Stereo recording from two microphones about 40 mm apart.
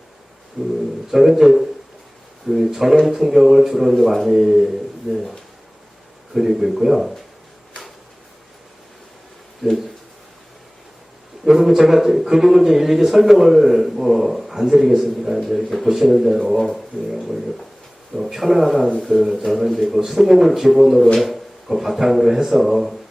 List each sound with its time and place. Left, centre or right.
0.6 s a man's voice: centre
6.3 s a man's voice: centre
11.4 s a man's voice: centre